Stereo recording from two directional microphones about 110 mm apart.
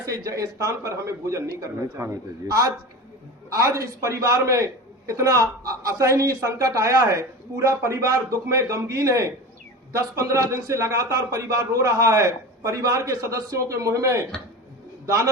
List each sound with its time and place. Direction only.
0.0 s a man's voice: 30° right (ahead or behind)